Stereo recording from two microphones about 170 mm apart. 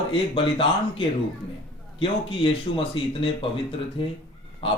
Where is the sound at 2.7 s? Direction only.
30° left (ahead or behind).